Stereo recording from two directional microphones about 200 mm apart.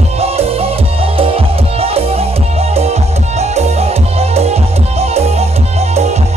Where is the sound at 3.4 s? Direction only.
30° right (ahead or behind).